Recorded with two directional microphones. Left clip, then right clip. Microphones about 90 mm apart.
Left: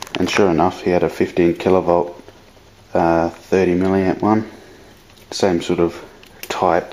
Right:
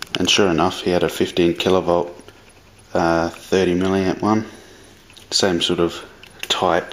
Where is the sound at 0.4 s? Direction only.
20° right (ahead or behind).